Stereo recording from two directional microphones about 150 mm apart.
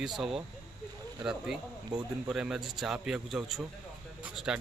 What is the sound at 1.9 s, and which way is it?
Speech, 25° right (ahead or behind).